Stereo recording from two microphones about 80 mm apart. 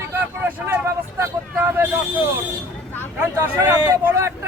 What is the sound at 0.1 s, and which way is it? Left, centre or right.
Vehicle, right.